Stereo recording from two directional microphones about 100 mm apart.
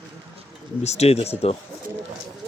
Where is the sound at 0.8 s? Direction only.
90° left.